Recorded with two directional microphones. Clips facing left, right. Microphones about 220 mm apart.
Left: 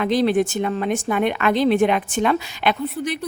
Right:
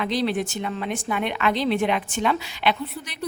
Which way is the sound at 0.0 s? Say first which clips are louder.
Left 6 dB; 50° left (ahead or behind).